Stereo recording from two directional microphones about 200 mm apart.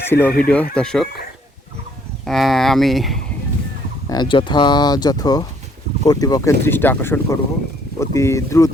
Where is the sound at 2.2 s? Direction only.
Centre (ahead or behind).